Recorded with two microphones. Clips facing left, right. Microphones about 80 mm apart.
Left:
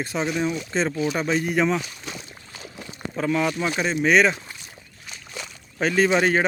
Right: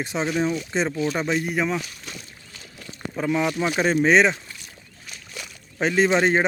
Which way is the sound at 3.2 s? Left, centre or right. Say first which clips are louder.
Even; centre.